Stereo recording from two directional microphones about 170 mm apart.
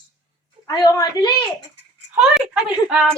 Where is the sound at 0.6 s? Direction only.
20° left (ahead or behind).